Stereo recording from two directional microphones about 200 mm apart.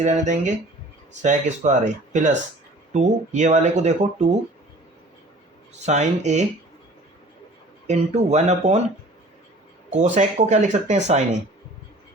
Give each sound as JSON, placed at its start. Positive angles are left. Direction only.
{"t": 0.0, "sound": "speech", "side_deg": -35}
{"t": 5.8, "sound": "speech", "side_deg": -35}
{"t": 7.9, "sound": "speech", "side_deg": -35}
{"t": 9.9, "sound": "speech", "side_deg": -35}